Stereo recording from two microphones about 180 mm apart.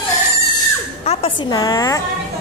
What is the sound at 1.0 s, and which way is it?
A woman's voice, 35° left (ahead or behind).